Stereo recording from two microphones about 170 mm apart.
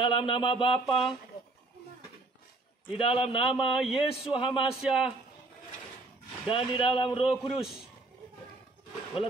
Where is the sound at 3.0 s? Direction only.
30° left (ahead or behind).